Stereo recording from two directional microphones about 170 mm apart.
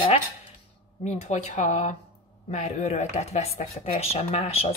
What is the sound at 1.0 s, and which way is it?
Speech, 40° left (ahead or behind).